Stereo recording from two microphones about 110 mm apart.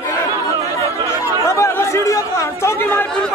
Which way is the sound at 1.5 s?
25° left (ahead or behind).